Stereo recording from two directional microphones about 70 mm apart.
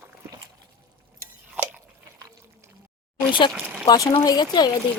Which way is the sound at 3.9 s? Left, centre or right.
Left.